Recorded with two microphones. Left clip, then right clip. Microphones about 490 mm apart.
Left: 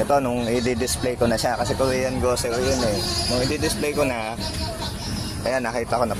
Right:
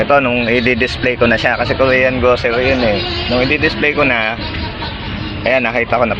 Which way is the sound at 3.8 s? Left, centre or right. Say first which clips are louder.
Right 10 dB; left.